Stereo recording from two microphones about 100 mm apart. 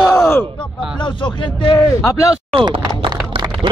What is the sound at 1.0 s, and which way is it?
Speech, 50° left (ahead or behind).